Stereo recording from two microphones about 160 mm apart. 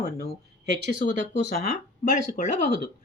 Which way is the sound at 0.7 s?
90° right.